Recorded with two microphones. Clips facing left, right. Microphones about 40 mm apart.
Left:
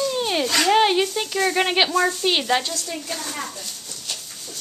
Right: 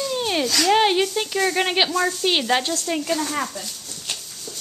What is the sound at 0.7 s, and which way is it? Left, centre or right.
Speech, centre.